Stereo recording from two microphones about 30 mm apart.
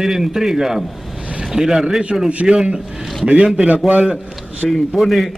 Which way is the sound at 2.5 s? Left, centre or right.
Right.